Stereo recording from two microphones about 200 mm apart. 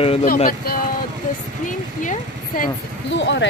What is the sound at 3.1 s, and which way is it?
Speech, 65° left (ahead or behind).